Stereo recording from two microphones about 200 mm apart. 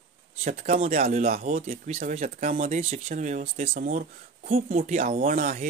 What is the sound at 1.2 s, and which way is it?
Speech, 45° right (ahead or behind).